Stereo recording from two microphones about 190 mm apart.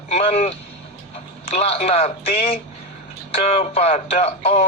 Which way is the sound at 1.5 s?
35° left (ahead or behind).